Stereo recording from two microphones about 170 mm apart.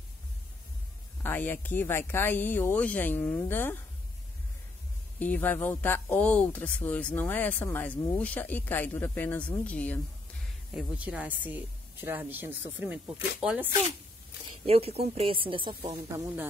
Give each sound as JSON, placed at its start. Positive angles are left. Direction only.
{"t": 1.2, "sound": "speech", "side_deg": 10}
{"t": 5.2, "sound": "speech", "side_deg": 10}
{"t": 10.7, "sound": "speech", "side_deg": -5}
{"t": 14.7, "sound": "a woman's voice", "side_deg": -35}